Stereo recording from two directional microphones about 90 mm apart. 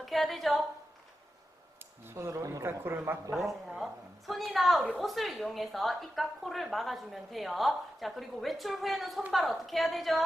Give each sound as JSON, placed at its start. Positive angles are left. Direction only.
{"t": 0.0, "sound": "a woman's voice", "side_deg": 0}
{"t": 2.0, "sound": "speech", "side_deg": -30}
{"t": 2.6, "sound": "speech", "side_deg": -25}
{"t": 3.3, "sound": "speech", "side_deg": 0}